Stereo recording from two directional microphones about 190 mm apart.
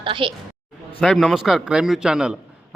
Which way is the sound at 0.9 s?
Centre (ahead or behind).